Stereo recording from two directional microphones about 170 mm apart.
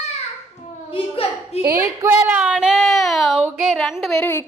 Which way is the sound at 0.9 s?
35° left (ahead or behind).